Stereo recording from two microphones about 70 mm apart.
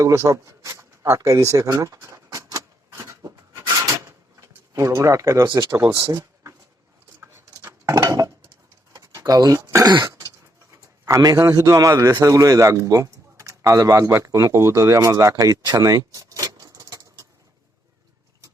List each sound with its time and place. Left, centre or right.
0.0 s speech: right
0.3 s a sound: right
5.9 s speech: right
7.2 s cutlery: right
8.0 s dishes: right
9.0 s a sound: right
10.2 s bird: right
11.4 s a man's voice: right